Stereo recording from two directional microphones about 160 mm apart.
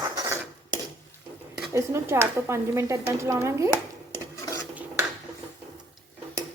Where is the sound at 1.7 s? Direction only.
15° right (ahead or behind).